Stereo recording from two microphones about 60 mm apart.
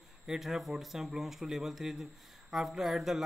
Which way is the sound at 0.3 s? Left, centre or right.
Centre.